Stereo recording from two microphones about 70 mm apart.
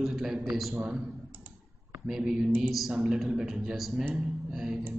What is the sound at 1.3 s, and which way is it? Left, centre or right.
Computer keyboard, right.